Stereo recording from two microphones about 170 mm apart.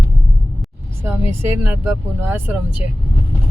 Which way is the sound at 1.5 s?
10° right (ahead or behind).